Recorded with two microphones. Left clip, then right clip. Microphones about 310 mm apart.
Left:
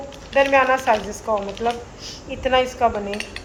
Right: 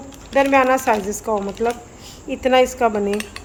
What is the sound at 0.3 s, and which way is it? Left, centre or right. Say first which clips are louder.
Cutlery: right 1 dB; right.